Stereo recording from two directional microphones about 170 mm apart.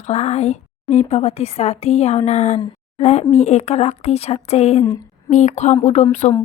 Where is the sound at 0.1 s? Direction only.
40° left (ahead or behind).